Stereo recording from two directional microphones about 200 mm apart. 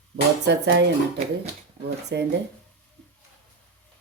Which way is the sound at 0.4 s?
60° right (ahead or behind).